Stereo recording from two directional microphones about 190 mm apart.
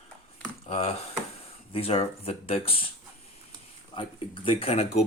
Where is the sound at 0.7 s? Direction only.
30° left (ahead or behind).